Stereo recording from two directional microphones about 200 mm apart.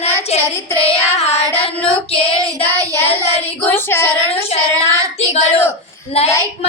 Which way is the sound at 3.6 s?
10° left (ahead or behind).